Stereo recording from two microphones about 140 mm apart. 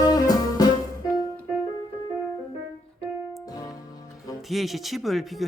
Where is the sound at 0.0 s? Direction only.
30° left (ahead or behind).